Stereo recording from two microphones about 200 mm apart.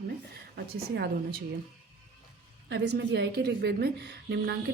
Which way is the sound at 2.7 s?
60° right (ahead or behind).